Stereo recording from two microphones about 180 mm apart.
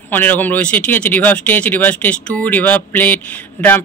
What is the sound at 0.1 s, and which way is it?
Speech, 10° left (ahead or behind).